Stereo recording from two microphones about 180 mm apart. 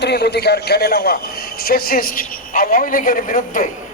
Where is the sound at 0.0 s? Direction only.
65° left (ahead or behind).